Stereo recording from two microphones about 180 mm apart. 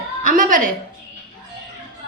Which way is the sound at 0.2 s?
50° right (ahead or behind).